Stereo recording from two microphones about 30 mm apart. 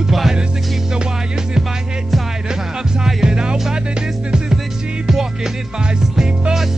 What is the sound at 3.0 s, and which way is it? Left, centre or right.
Music, right.